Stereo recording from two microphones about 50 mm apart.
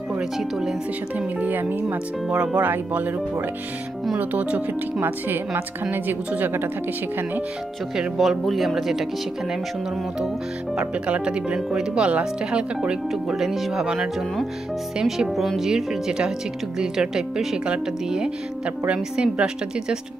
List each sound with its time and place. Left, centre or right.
0.2 s speech: centre
1.1 s a woman's voice: right
2.2 s speech: right
2.6 s a woman's voice: right
5.0 s a woman's voice: right
8.2 s speech: centre
10.8 s speech: right
13.3 s speech: centre
15.0 s speech: centre
15.7 s speech: centre